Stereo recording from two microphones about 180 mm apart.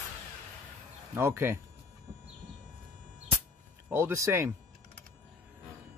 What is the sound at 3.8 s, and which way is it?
Speech, 15° right (ahead or behind).